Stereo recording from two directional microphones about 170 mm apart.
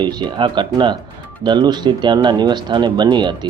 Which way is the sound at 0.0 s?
25° right (ahead or behind).